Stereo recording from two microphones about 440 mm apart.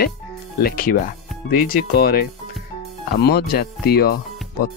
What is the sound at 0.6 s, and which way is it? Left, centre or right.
Speech, centre.